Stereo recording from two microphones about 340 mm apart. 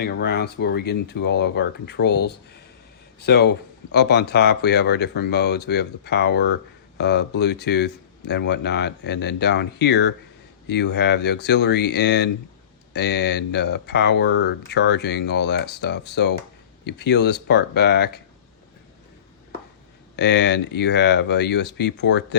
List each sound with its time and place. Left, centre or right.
0.0 s speech: left
20.1 s speech: left